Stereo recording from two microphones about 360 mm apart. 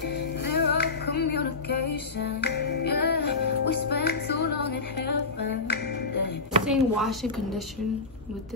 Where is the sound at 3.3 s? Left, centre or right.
Left.